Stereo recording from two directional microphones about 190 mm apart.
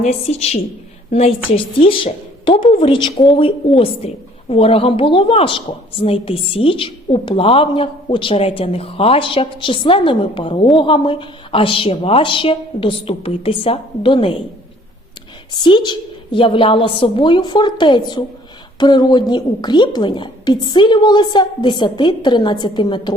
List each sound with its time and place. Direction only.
0.0 s a woman's voice: 35° left (ahead or behind)
15.5 s a woman's voice: 25° left (ahead or behind)